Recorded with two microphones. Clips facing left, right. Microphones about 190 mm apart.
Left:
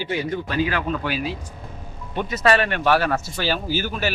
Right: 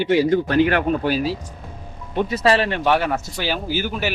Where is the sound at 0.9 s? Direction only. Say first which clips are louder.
Right 5 dB; 40° right (ahead or behind).